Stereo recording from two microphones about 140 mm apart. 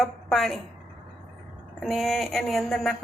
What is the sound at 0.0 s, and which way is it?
Speech, centre (ahead or behind).